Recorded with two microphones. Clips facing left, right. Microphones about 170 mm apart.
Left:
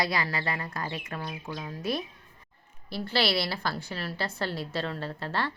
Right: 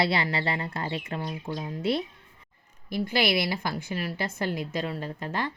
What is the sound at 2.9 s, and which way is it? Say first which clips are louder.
A woman's voice: right 2 dB; 15° right (ahead or behind).